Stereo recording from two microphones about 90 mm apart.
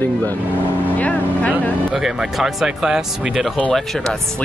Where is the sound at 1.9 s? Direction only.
5° right (ahead or behind).